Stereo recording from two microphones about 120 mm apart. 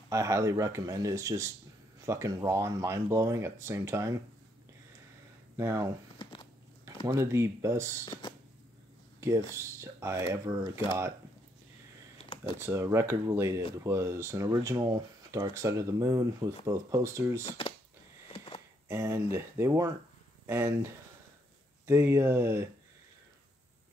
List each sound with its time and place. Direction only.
0.1 s speech: 25° right (ahead or behind)
5.6 s speech: 25° right (ahead or behind)
7.1 s speech: 25° right (ahead or behind)
8.0 s speech: 40° left (ahead or behind)
9.2 s speech: 25° right (ahead or behind)
12.2 s computer keyboard: 45° left (ahead or behind)
12.5 s speech: 20° right (ahead or behind)
17.5 s speech: 45° left (ahead or behind)
18.3 s a sound: 45° left (ahead or behind)
18.9 s speech: 25° right (ahead or behind)